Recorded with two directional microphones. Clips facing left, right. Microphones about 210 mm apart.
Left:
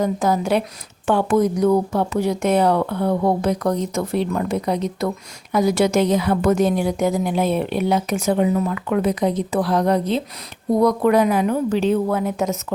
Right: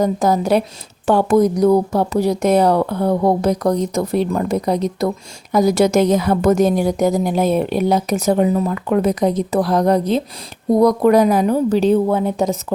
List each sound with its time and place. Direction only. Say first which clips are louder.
0.0 s speech: right 3 dB; 40° right (ahead or behind)